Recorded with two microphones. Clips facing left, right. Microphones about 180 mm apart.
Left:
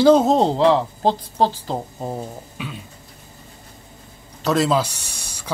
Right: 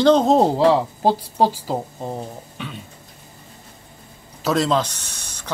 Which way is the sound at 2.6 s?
Centre (ahead or behind).